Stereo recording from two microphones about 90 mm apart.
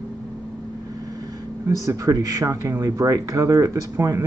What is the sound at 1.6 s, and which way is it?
Speech, 35° right (ahead or behind).